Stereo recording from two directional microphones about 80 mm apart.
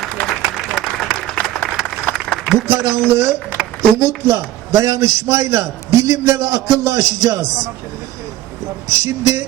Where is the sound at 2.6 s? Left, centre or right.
Right.